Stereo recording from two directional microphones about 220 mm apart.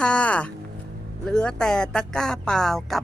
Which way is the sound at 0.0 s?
5° left (ahead or behind).